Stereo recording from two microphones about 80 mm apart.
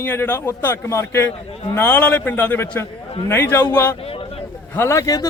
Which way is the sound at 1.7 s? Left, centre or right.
Left.